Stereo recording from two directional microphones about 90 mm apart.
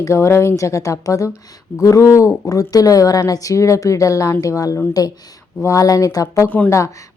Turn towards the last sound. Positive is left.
turn(degrees=35)  # may be behind; listen again after turning